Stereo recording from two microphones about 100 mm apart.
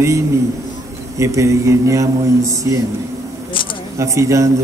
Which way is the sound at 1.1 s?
30° right (ahead or behind).